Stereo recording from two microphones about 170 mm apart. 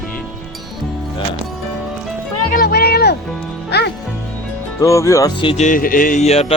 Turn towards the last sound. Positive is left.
turn(degrees=35)  # may be behind; listen again after turning